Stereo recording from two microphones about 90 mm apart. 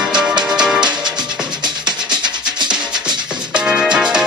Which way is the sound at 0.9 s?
55° right (ahead or behind).